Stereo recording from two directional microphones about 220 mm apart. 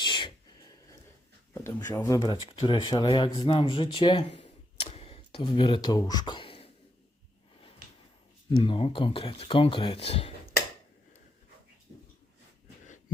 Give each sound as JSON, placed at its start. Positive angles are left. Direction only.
{"t": 0.0, "sound": "a sound", "side_deg": 20}
{"t": 1.5, "sound": "speech", "side_deg": 10}
{"t": 4.4, "sound": "camera", "side_deg": 30}
{"t": 8.4, "sound": "speech", "side_deg": 25}